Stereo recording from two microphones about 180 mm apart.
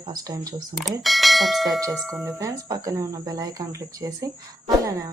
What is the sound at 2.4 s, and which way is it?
Speech, 20° right (ahead or behind).